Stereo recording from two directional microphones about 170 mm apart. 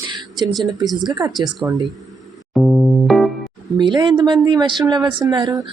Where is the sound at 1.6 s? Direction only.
10° right (ahead or behind).